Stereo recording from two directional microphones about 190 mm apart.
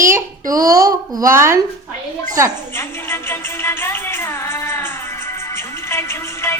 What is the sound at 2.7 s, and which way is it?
Music, 10° left (ahead or behind).